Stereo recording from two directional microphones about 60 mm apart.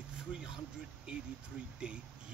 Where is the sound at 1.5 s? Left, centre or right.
Centre.